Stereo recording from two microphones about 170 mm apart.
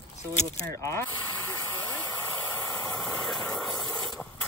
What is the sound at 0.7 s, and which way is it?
Speech, 15° left (ahead or behind).